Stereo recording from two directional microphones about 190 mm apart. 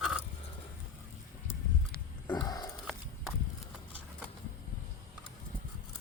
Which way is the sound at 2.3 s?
20° left (ahead or behind).